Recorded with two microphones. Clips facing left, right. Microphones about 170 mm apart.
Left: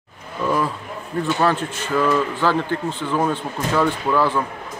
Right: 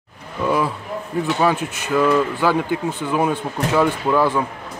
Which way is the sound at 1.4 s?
10° right (ahead or behind).